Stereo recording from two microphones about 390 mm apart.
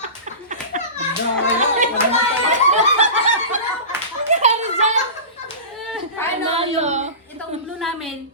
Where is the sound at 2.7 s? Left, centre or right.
Centre.